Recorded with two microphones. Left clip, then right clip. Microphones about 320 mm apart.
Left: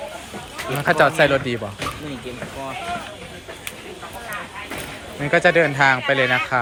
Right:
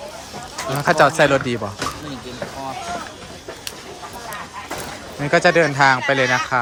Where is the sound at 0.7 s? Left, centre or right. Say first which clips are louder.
Right 2 dB; centre.